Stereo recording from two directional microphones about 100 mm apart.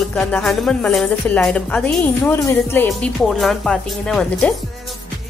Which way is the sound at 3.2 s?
Centre (ahead or behind).